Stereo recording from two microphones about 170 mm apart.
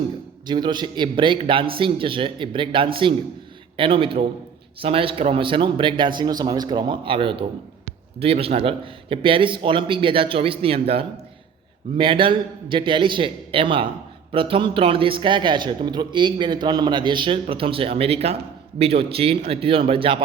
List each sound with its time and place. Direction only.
0.4 s a man's voice: 25° right (ahead or behind)